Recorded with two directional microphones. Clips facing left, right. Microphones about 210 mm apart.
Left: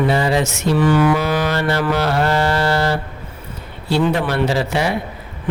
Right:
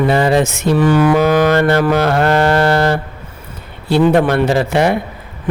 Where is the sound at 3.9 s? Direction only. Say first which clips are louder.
Right 6 dB; 55° right (ahead or behind).